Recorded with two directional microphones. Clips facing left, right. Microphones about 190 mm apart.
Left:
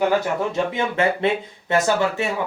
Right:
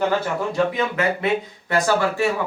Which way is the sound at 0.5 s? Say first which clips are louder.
Right 1 dB; 25° left (ahead or behind).